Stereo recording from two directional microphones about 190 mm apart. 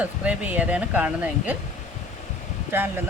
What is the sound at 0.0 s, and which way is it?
Speech, 10° right (ahead or behind).